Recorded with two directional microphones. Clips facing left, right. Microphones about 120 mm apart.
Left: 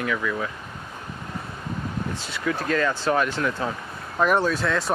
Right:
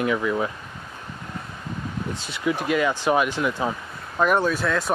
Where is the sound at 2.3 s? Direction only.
15° right (ahead or behind).